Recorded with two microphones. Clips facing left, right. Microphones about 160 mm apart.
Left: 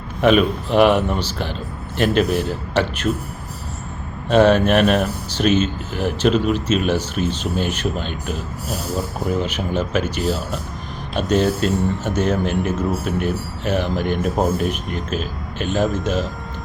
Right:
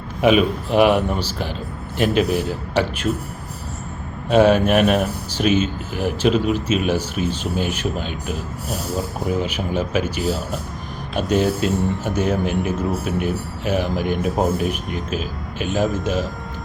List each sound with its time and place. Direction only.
0.2 s speech: 5° right (ahead or behind)
4.3 s speech: 5° right (ahead or behind)